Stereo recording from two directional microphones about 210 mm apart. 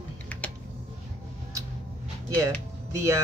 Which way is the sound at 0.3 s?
5° left (ahead or behind).